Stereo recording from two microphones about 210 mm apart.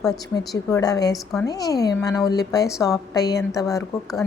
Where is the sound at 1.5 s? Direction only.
15° left (ahead or behind).